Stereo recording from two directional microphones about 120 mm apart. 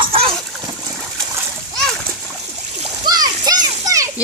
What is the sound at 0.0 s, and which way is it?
Splash, 50° right (ahead or behind).